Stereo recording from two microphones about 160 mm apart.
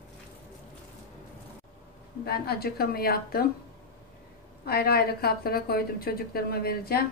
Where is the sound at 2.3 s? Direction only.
75° left (ahead or behind).